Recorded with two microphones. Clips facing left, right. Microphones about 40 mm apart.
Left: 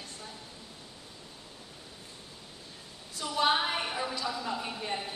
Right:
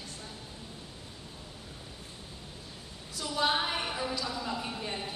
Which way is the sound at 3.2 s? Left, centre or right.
Centre.